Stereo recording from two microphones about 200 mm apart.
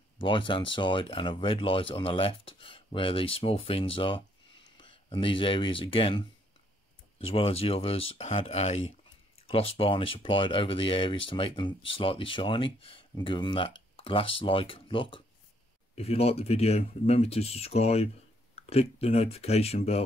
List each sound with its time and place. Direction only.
0.2 s speech: 25° left (ahead or behind)